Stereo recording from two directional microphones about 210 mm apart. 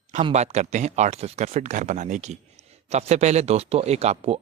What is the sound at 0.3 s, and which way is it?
Speech, 30° right (ahead or behind).